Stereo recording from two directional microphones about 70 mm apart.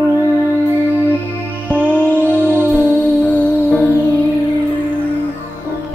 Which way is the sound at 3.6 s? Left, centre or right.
Left.